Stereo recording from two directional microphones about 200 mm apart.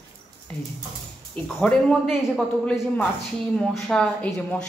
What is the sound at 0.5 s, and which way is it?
Speech, 5° left (ahead or behind).